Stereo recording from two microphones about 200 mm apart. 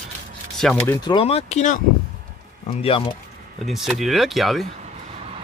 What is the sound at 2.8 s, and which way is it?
Speech, 25° left (ahead or behind).